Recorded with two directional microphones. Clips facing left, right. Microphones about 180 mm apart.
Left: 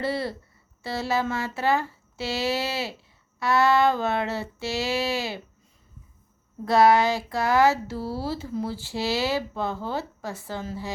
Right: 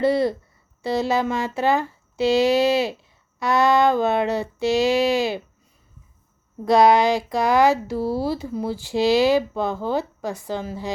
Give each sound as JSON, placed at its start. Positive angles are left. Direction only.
{"t": 0.0, "sound": "speech", "side_deg": -20}
{"t": 6.7, "sound": "speech", "side_deg": -15}